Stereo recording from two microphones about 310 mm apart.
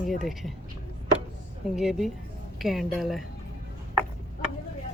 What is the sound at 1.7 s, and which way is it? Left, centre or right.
Speech, centre.